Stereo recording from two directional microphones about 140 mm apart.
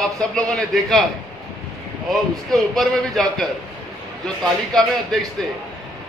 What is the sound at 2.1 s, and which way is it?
A man's voice, centre (ahead or behind).